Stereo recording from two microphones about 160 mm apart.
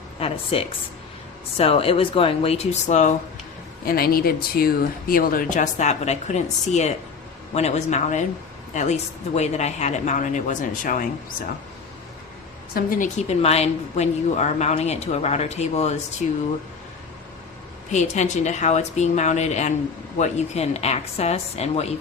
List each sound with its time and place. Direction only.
0.2 s speech: 35° left (ahead or behind)
3.8 s speech: 65° left (ahead or behind)
12.7 s speech: 65° left (ahead or behind)
13.1 s speech: 40° left (ahead or behind)
17.9 s speech: 45° left (ahead or behind)